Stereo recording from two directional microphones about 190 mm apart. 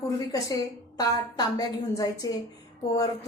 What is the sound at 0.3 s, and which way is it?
A woman's voice, 20° left (ahead or behind).